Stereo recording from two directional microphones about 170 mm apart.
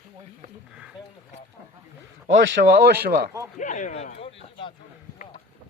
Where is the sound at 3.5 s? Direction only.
45° left (ahead or behind).